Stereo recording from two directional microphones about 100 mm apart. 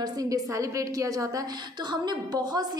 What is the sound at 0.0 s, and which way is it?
A woman's voice, 35° right (ahead or behind).